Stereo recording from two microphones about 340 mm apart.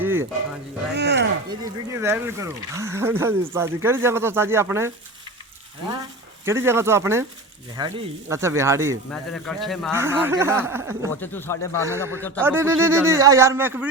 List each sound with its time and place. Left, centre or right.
0.0 s music: centre
0.9 s speech: right
1.5 s speech: centre
5.9 s speech: centre
11.2 s speech: centre
11.9 s speech: centre